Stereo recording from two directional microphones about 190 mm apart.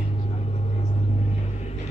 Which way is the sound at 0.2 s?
35° left (ahead or behind).